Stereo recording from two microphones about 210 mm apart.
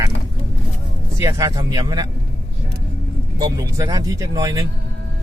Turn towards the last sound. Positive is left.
turn(degrees=-15)  # may be behind; listen again after turning